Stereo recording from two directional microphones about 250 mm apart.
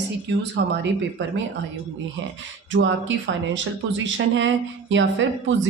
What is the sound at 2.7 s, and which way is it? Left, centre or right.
Speech, right.